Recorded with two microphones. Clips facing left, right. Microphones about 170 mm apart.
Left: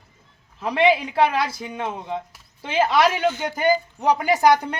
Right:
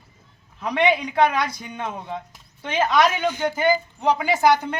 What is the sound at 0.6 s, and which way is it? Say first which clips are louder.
Speech: left 2 dB; 5° left (ahead or behind).